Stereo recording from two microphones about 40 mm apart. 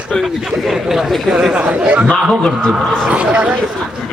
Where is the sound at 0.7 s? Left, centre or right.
Centre.